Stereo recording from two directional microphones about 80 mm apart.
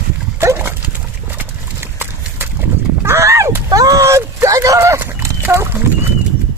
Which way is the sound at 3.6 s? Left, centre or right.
Right.